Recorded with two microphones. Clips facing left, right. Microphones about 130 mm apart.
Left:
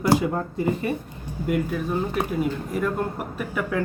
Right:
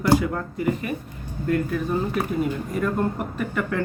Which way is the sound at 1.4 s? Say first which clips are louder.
Right 1 dB; 10° left (ahead or behind).